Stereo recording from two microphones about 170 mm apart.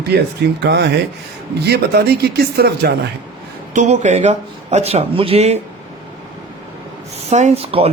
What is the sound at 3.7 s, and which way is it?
Speech, 45° right (ahead or behind).